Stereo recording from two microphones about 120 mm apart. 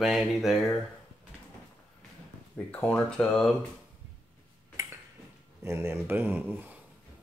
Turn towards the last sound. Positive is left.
turn(degrees=-15)  # may be behind; listen again after turning